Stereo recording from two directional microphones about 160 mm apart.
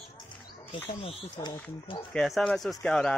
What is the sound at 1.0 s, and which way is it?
Speech, 25° left (ahead or behind).